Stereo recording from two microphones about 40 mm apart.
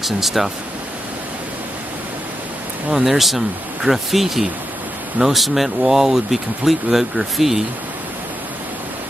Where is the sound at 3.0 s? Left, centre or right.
Centre.